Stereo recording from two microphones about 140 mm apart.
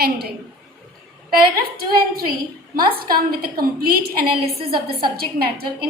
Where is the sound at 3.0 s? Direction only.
90° right.